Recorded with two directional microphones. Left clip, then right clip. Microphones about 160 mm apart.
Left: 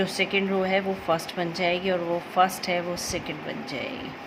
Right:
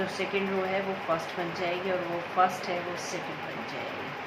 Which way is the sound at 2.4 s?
90° left.